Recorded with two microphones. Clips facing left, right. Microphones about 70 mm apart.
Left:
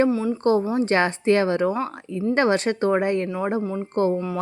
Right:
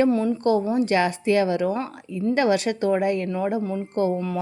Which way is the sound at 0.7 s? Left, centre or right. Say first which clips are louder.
Even; left.